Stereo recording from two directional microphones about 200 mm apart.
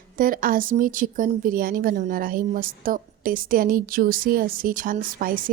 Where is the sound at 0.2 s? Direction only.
45° right (ahead or behind).